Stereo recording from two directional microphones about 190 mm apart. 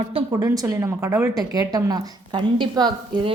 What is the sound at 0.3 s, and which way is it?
Speech, 15° right (ahead or behind).